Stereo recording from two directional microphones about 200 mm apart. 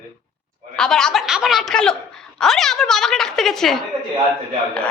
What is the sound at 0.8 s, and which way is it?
A woman's voice, 5° left (ahead or behind).